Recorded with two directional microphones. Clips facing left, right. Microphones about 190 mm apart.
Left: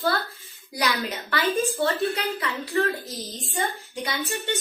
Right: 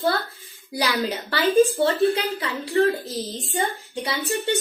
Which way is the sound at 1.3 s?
30° right (ahead or behind).